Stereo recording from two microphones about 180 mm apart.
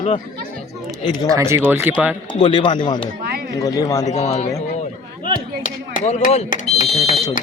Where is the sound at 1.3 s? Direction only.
15° right (ahead or behind).